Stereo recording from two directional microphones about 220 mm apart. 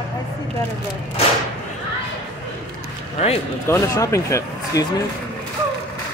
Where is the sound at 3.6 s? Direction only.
15° left (ahead or behind).